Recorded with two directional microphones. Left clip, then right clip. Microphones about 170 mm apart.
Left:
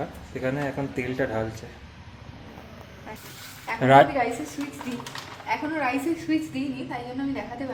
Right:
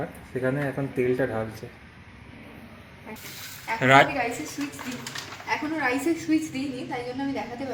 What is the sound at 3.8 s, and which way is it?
Speech, 25° left (ahead or behind).